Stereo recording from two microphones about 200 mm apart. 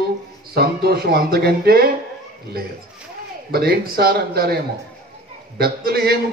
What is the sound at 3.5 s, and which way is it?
A man's voice, 50° right (ahead or behind).